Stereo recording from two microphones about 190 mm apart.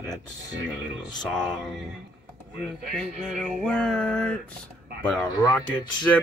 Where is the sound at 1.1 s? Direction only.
5° left (ahead or behind).